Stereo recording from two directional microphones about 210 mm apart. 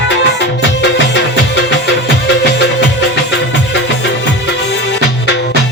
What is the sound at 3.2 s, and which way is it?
Music, 55° left (ahead or behind).